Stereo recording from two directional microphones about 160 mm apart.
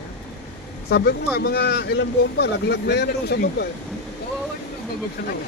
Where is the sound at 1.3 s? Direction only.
85° left.